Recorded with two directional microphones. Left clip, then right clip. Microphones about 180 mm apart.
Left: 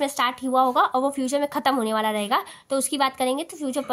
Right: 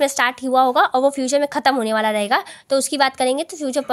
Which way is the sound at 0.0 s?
35° right (ahead or behind).